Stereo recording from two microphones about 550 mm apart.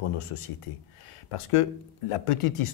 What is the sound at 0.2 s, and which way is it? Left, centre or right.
Speech, left.